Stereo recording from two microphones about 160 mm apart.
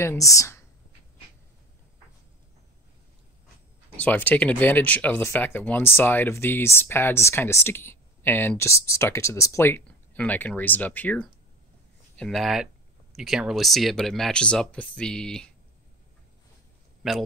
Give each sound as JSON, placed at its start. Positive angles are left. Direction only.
{"t": 0.0, "sound": "speech", "side_deg": 20}
{"t": 3.9, "sound": "speech", "side_deg": 10}
{"t": 17.0, "sound": "speech", "side_deg": 0}